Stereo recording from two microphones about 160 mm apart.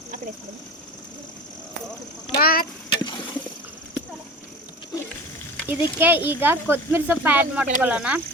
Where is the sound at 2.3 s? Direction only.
65° left (ahead or behind).